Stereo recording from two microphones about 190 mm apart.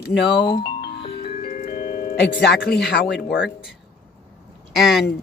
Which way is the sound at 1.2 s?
50° left (ahead or behind).